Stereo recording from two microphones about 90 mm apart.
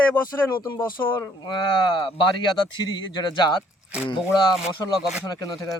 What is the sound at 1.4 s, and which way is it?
Speech, 60° left (ahead or behind).